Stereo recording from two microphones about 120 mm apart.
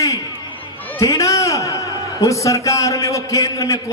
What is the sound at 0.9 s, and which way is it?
A man's voice, 25° left (ahead or behind).